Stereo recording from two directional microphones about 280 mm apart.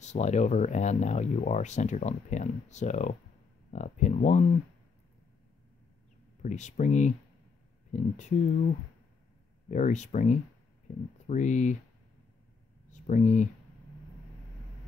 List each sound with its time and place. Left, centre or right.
0.0 s speech: left
6.4 s speech: left
9.7 s speech: left
13.0 s speech: left